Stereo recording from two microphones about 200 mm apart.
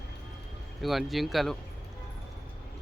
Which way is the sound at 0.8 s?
Centre (ahead or behind).